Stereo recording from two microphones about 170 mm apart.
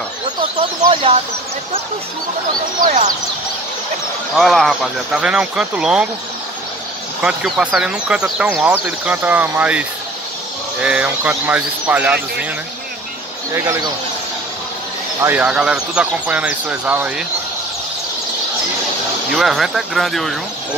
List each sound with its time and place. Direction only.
0.4 s speech: 35° right (ahead or behind)
2.8 s speech: 50° right (ahead or behind)
4.4 s speech: centre (ahead or behind)
7.2 s speech: 5° right (ahead or behind)
13.5 s speech: 15° right (ahead or behind)
15.1 s speech: 10° right (ahead or behind)
19.3 s speech: centre (ahead or behind)